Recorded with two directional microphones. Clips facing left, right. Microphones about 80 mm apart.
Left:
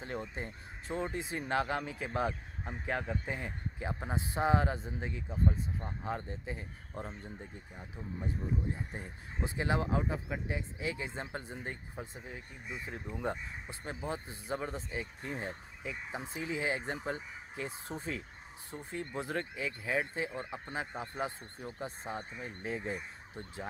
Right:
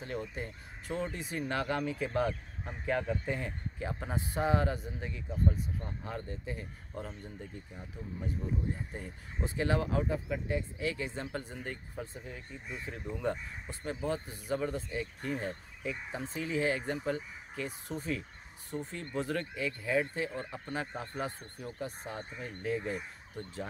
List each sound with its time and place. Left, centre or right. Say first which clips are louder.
0.0 s speech: right 1 dB; left
8.9 s speech: right 1 dB; left